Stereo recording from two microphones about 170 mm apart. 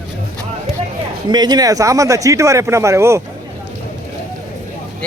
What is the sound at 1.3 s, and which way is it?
Speech, 25° right (ahead or behind).